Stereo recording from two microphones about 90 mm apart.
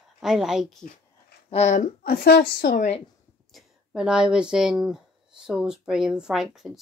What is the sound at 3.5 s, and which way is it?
Speech, 10° right (ahead or behind).